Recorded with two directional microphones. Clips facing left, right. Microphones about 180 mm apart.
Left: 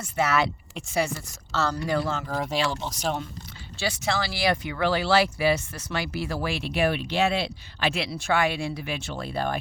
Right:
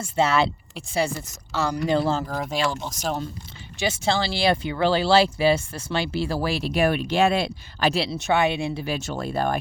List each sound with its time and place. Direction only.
0.0 s speech: 25° right (ahead or behind)
1.5 s a woman's voice: 15° right (ahead or behind)
1.9 s speech: 30° right (ahead or behind)
2.2 s speech: centre (ahead or behind)
3.8 s speech: 25° right (ahead or behind)
8.8 s speech: 40° right (ahead or behind)